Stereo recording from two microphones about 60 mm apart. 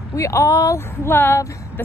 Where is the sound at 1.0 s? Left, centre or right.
Left.